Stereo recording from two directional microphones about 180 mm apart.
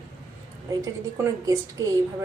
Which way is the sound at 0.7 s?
15° right (ahead or behind).